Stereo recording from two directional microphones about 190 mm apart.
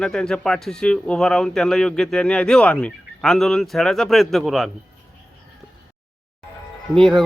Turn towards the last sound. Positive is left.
turn(degrees=0)  # may be behind; listen again after turning